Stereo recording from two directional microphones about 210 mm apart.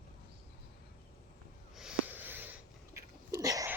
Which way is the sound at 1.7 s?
5° right (ahead or behind).